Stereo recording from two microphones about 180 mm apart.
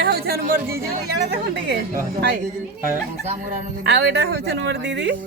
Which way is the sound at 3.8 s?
70° right (ahead or behind).